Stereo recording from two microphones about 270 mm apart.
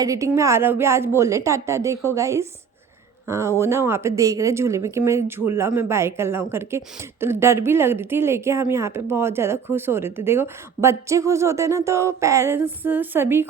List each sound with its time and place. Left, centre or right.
0.0 s speech: centre